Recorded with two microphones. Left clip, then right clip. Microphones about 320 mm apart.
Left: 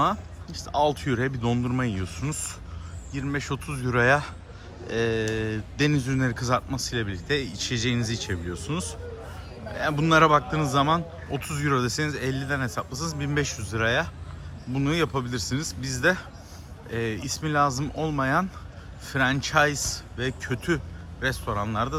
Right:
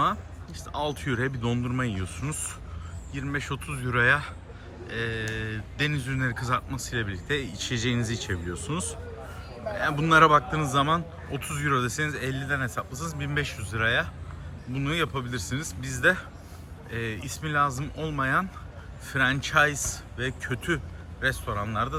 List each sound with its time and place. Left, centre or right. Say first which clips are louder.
0.0 s a man's voice: left 1 dB; centre